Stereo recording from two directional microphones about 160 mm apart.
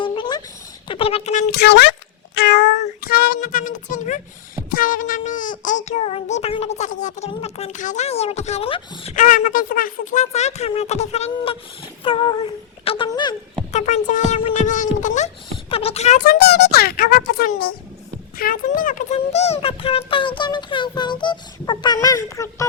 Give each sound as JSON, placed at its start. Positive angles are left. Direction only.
{"t": 0.0, "sound": "a sound", "side_deg": 30}
{"t": 0.9, "sound": "speech", "side_deg": 35}
{"t": 1.5, "sound": "speech", "side_deg": 90}
{"t": 3.0, "sound": "speech", "side_deg": 70}
{"t": 4.7, "sound": "child singing", "side_deg": 60}
{"t": 9.1, "sound": "child singing", "side_deg": 50}
{"t": 11.3, "sound": "speech", "side_deg": 35}
{"t": 13.7, "sound": "child singing", "side_deg": 45}
{"t": 15.7, "sound": "speech", "side_deg": 40}
{"t": 16.2, "sound": "a child's voice", "side_deg": 75}